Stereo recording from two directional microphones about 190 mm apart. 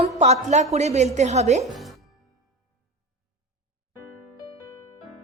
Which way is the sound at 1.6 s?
Centre (ahead or behind).